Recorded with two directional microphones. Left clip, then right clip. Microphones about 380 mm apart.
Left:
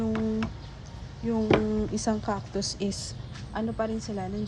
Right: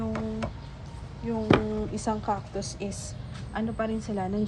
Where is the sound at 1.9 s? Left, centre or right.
Left.